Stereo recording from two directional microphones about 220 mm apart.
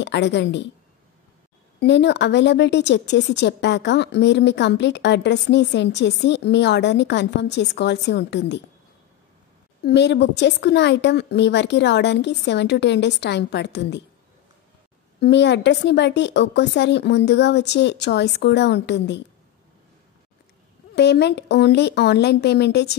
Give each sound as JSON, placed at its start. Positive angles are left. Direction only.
{"t": 0.0, "sound": "a woman's voice", "side_deg": 55}
{"t": 1.8, "sound": "a woman's voice", "side_deg": 50}
{"t": 9.8, "sound": "a woman's voice", "side_deg": 50}
{"t": 15.1, "sound": "a woman's voice", "side_deg": 50}
{"t": 20.9, "sound": "a woman's voice", "side_deg": 50}